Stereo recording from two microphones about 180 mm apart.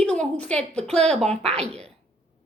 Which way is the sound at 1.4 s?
35° right (ahead or behind).